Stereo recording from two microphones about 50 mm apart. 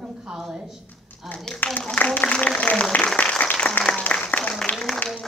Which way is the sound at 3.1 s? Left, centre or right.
Left.